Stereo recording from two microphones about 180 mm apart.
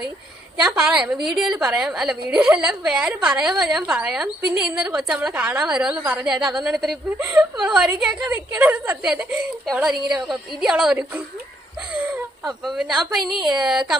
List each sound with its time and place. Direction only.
0.6 s a woman's voice: 5° right (ahead or behind)
7.2 s a woman's voice: 10° right (ahead or behind)
12.0 s whimper: 5° right (ahead or behind)
13.3 s a woman's voice: centre (ahead or behind)